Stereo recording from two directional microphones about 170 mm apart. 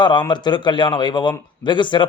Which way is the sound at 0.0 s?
25° left (ahead or behind).